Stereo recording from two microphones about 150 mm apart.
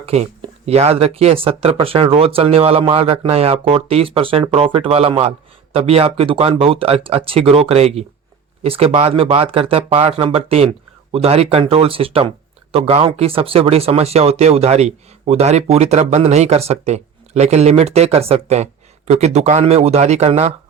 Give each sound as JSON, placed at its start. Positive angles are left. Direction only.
{"t": 0.0, "sound": "speech", "side_deg": -45}